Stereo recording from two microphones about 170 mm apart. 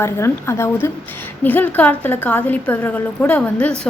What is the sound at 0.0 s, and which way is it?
A woman's voice, 15° left (ahead or behind).